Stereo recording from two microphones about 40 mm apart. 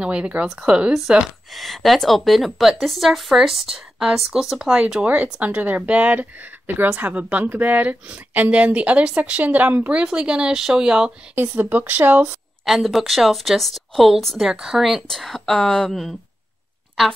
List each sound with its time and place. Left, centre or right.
0.0 s speech: right
1.5 s speech: centre
4.7 s speech: right
5.0 s speech: right
6.7 s speech: right
7.2 s speech: right
11.3 s speech: right
12.6 s speech: centre
15.0 s speech: centre